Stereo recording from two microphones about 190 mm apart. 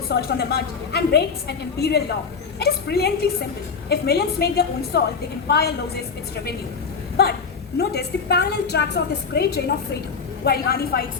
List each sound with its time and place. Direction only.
0.1 s a woman's voice: 55° left (ahead or behind)
7.8 s a woman's voice: 60° left (ahead or behind)